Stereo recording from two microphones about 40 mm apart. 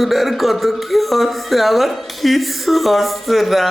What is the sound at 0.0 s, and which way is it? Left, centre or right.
Speech, centre.